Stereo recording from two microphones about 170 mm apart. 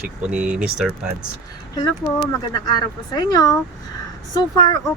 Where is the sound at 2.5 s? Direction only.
25° left (ahead or behind).